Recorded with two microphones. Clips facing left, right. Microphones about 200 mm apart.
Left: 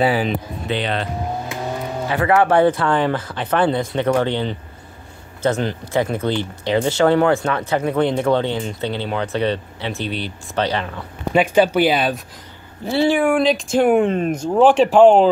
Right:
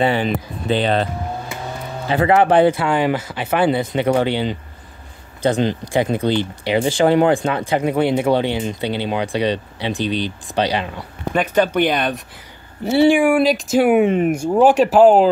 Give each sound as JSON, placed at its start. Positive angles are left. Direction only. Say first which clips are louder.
{"t": 0.0, "sound": "speech", "louder": "even", "side_deg": 5}
{"t": 0.7, "sound": "speech", "louder": "right 5 dB", "side_deg": -35}
{"t": 2.0, "sound": "speech", "louder": "right 2 dB", "side_deg": -25}
{"t": 11.3, "sound": "speech", "louder": "left 2 dB", "side_deg": 10}
{"t": 12.8, "sound": "speech", "louder": "right 3 dB", "side_deg": -15}